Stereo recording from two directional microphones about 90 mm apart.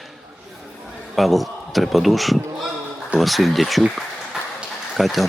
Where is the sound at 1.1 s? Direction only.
Centre (ahead or behind).